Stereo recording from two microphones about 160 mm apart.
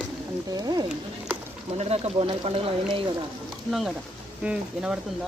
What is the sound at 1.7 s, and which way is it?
Speech, 40° right (ahead or behind).